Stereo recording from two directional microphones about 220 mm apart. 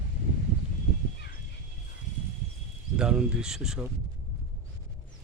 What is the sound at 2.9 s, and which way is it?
Speech, 5° right (ahead or behind).